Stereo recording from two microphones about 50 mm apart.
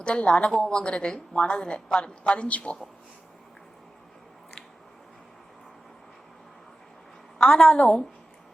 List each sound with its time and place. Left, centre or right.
0.0 s a woman's voice: left
7.3 s a woman's voice: centre